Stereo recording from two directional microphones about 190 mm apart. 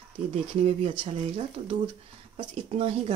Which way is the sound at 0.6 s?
30° right (ahead or behind).